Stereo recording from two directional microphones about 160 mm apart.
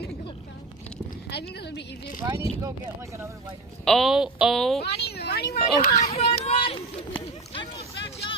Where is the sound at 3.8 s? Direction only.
Centre (ahead or behind).